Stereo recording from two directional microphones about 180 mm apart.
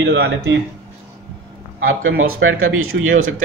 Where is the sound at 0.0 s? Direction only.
65° right (ahead or behind).